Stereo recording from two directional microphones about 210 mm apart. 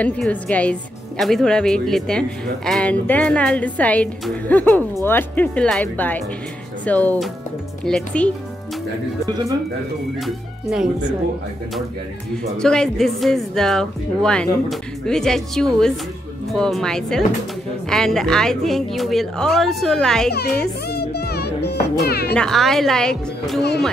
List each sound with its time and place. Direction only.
0.0 s a woman's voice: 5° left (ahead or behind)
9.3 s speech: 15° right (ahead or behind)
10.2 s a woman's voice: 5° right (ahead or behind)
12.5 s a woman's voice: 5° left (ahead or behind)
20.9 s music: 50° left (ahead or behind)
22.0 s speech: 50° left (ahead or behind)
22.3 s a woman's voice: centre (ahead or behind)